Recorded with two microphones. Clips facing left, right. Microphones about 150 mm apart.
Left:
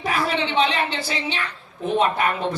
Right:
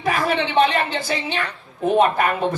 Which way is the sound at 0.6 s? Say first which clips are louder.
Right 3 dB; 50° right (ahead or behind).